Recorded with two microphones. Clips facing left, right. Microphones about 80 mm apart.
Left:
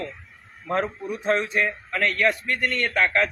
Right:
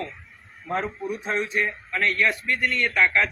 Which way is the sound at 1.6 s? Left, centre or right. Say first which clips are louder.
Left 1 dB; left.